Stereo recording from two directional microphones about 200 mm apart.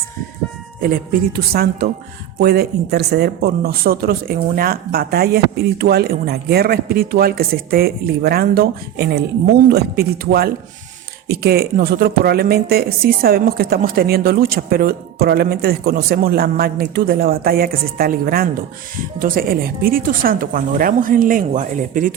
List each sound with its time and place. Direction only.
0.8 s speech: 45° right (ahead or behind)